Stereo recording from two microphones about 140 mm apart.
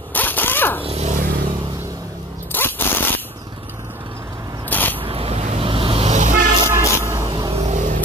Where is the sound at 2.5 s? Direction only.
15° left (ahead or behind).